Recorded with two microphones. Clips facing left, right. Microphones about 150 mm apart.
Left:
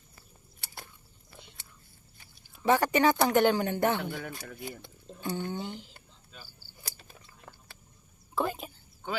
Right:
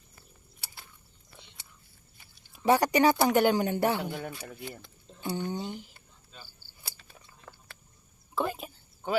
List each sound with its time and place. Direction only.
2.6 s speech: 15° right (ahead or behind)
4.1 s speech: 30° right (ahead or behind)
5.2 s speech: 15° right (ahead or behind)
7.5 s a sound: 10° left (ahead or behind)
8.4 s speech: centre (ahead or behind)